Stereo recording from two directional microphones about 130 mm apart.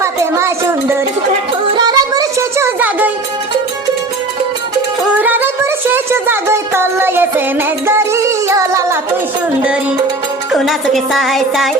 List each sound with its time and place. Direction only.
0.0 s a sound: 20° right (ahead or behind)
1.7 s music: 30° right (ahead or behind)
2.7 s music: 15° right (ahead or behind)
5.2 s music: 15° right (ahead or behind)
10.5 s speech: centre (ahead or behind)